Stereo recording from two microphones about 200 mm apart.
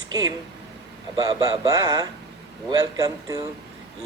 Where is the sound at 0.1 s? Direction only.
20° right (ahead or behind).